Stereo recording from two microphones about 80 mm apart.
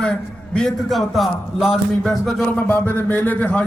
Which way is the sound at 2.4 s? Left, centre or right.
Left.